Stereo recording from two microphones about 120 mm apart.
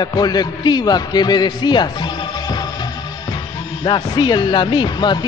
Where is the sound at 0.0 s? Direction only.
35° left (ahead or behind).